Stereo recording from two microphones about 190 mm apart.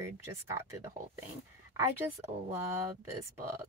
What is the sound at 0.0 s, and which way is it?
Speech, 15° right (ahead or behind).